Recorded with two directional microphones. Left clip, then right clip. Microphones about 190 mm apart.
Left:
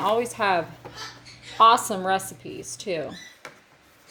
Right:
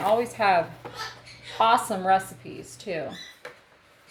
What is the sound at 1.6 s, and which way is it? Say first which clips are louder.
Speech: left 4 dB; 35° left (ahead or behind).